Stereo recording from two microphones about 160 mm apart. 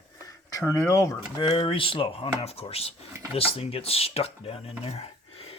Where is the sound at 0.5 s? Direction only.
20° left (ahead or behind).